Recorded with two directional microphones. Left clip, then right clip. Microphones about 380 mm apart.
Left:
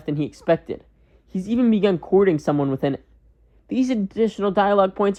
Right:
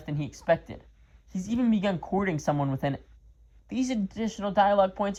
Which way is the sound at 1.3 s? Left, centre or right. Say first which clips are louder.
Left 7 dB; centre.